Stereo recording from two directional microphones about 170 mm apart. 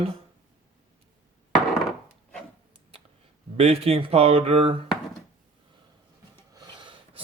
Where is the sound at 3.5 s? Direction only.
35° right (ahead or behind).